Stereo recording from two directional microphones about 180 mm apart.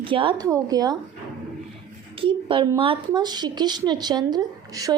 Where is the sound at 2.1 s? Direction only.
30° right (ahead or behind).